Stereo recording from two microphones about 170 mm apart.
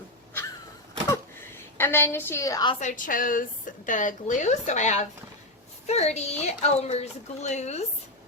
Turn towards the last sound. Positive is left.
turn(degrees=40)  # may be behind; listen again after turning